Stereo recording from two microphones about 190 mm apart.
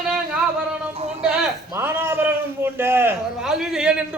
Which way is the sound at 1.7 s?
10° right (ahead or behind).